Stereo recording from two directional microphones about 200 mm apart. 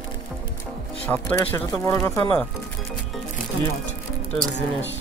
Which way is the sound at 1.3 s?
20° left (ahead or behind).